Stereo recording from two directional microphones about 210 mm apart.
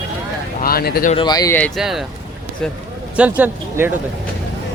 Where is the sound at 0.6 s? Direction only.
45° left (ahead or behind).